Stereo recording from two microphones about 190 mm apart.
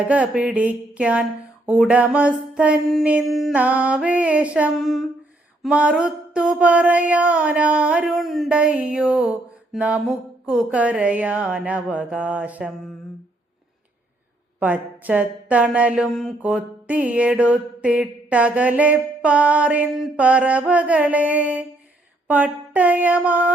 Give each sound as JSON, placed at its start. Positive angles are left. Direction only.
{"t": 0.0, "sound": "speech", "side_deg": -5}
{"t": 5.6, "sound": "a sound", "side_deg": -5}
{"t": 9.7, "sound": "speech", "side_deg": -5}
{"t": 14.6, "sound": "speech", "side_deg": -10}